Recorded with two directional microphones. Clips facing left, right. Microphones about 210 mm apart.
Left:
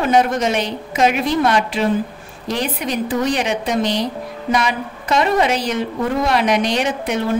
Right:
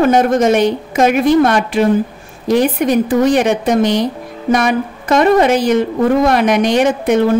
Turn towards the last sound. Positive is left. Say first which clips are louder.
# right 8 dB
turn(degrees=-50)  # may be behind; listen again after turning